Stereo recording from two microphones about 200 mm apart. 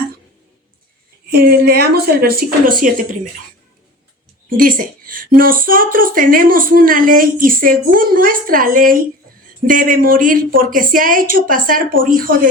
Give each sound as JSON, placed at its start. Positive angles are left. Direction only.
{"t": 1.3, "sound": "speech", "side_deg": -50}
{"t": 4.4, "sound": "speech", "side_deg": -45}